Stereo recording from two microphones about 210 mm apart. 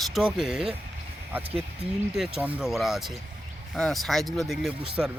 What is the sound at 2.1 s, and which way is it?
Speech, 5° right (ahead or behind).